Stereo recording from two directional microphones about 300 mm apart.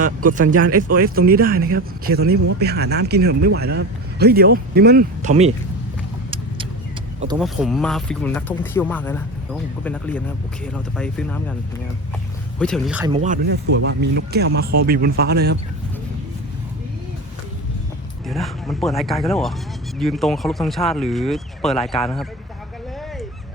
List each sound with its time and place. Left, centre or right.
0.7 s speech: right
1.0 s speech: right
7.3 s speech: centre
12.5 s speech: centre
13.1 s speech: right
18.3 s speech: centre